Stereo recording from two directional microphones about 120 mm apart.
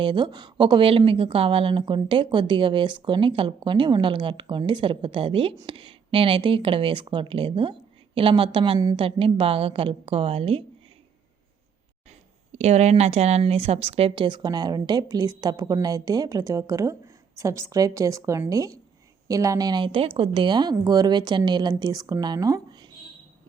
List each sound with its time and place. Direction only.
0.0 s a woman's voice: 40° right (ahead or behind)
12.5 s speech: 65° right (ahead or behind)
14.3 s a woman's voice: 35° right (ahead or behind)